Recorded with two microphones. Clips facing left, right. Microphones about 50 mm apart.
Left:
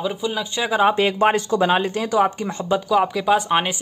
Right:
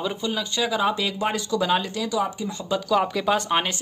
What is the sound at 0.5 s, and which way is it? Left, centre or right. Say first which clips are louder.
A man's voice: left 6 dB; left.